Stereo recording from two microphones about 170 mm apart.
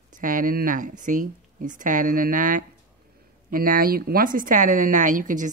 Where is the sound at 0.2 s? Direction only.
55° right (ahead or behind).